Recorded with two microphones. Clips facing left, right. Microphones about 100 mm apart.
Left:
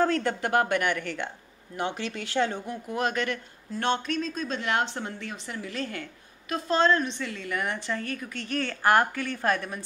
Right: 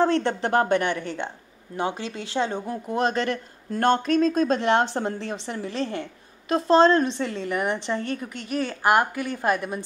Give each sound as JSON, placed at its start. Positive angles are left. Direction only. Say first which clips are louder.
{"t": 0.0, "sound": "a woman's voice", "louder": "right 3 dB", "side_deg": -25}
{"t": 2.6, "sound": "a woman's voice", "louder": "right 4 dB", "side_deg": -35}
{"t": 3.7, "sound": "a woman's voice", "louder": "right 7 dB", "side_deg": -45}